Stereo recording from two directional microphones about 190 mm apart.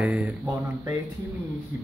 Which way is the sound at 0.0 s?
5° right (ahead or behind).